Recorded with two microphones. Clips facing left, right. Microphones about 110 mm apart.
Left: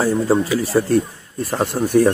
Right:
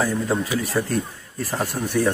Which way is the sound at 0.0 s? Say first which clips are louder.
Left 6 dB; 30° left (ahead or behind).